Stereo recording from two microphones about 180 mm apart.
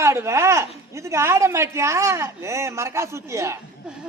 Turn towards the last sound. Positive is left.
turn(degrees=-15)  # may be behind; listen again after turning